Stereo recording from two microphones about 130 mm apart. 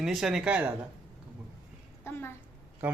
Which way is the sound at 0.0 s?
5° right (ahead or behind).